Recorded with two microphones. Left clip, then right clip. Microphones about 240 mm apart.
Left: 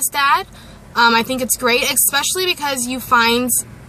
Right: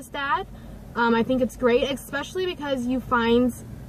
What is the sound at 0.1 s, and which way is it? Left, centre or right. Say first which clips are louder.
A woman's voice: left 10 dB; centre.